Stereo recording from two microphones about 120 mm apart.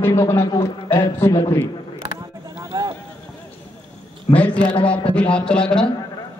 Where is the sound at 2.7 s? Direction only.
30° right (ahead or behind).